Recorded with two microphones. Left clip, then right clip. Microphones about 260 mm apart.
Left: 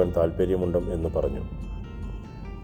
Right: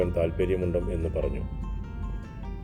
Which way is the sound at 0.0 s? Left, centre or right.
Centre.